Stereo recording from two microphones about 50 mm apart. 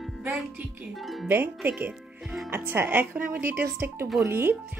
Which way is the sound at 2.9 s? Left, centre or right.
Right.